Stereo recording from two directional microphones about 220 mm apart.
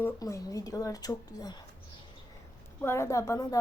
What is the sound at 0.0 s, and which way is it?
A woman's voice, 15° left (ahead or behind).